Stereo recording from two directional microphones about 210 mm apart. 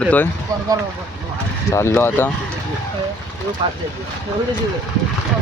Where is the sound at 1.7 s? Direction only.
10° left (ahead or behind).